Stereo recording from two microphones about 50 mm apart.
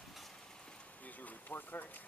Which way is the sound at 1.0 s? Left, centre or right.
Left.